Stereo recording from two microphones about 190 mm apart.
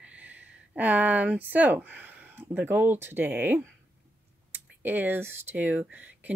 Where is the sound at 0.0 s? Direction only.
5° right (ahead or behind).